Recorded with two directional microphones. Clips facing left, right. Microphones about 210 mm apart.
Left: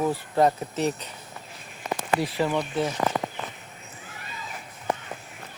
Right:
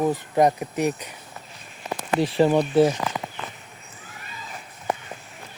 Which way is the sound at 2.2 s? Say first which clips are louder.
Right 12 dB; 30° right (ahead or behind).